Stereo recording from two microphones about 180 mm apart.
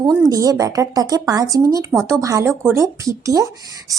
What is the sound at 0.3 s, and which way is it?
Speech, 20° right (ahead or behind).